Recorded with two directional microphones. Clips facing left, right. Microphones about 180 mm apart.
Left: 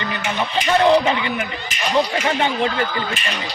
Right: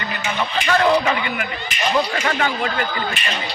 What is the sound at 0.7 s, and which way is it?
A man's voice, 25° left (ahead or behind).